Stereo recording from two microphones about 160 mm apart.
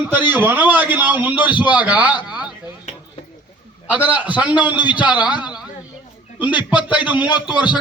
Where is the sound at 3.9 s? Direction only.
10° right (ahead or behind).